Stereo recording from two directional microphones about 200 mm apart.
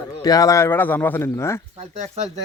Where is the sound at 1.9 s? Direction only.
35° right (ahead or behind).